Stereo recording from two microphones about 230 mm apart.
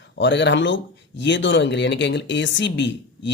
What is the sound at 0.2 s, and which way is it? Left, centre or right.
Speech, left.